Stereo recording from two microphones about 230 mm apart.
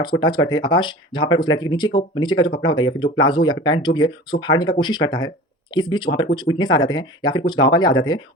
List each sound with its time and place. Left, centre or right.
0.0 s speech: centre